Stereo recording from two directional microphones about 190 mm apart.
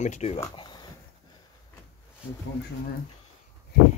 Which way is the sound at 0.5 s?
25° left (ahead or behind).